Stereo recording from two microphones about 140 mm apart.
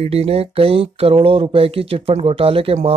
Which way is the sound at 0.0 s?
45° right (ahead or behind).